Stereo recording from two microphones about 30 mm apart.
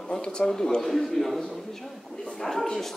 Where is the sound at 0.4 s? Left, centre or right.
Centre.